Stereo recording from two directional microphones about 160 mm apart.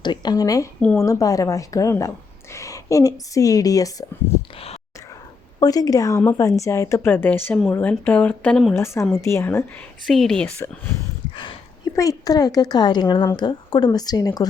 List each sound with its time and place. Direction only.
0.0 s a woman's voice: 25° left (ahead or behind)
4.3 s a sound: 15° left (ahead or behind)
5.5 s a woman's voice: 25° left (ahead or behind); by 8.7 s 5° left (ahead or behind)
8.7 s speech: 15° left (ahead or behind)
10.1 s a woman's voice: 5° left (ahead or behind)
11.9 s a woman's voice: 20° left (ahead or behind)